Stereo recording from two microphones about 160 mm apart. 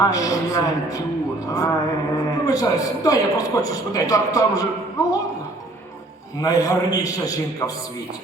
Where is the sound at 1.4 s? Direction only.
20° left (ahead or behind).